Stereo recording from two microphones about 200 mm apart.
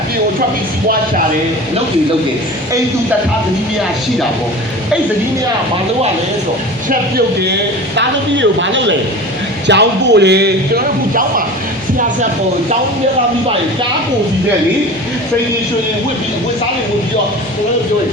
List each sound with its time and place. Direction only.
7.9 s a man's voice: 65° right (ahead or behind)